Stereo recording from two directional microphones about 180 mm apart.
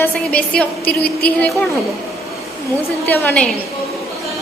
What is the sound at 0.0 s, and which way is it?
A woman's voice, 5° left (ahead or behind).